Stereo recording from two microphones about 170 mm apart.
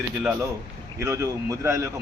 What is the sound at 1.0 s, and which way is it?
Speech, 15° right (ahead or behind).